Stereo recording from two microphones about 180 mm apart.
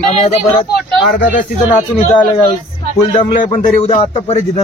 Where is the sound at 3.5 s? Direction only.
35° left (ahead or behind).